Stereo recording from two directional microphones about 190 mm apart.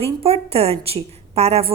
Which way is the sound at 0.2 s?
30° right (ahead or behind).